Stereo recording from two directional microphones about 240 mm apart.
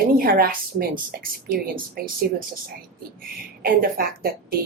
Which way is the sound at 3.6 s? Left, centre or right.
Right.